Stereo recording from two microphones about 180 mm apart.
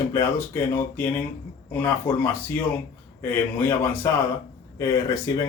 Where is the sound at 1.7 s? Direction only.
10° left (ahead or behind).